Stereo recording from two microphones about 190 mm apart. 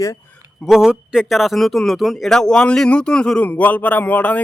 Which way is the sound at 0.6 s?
Centre (ahead or behind).